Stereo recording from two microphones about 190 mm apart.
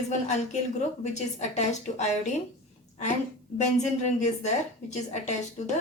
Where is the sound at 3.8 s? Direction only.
35° left (ahead or behind).